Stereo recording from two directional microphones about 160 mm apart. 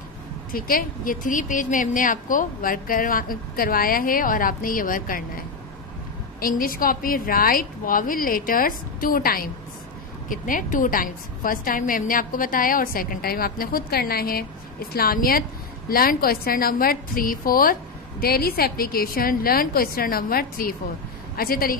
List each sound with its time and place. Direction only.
0.5 s a woman's voice: 60° left (ahead or behind)
6.4 s a woman's voice: 65° left (ahead or behind)